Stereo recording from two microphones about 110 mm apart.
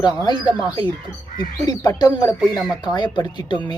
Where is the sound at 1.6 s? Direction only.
35° left (ahead or behind).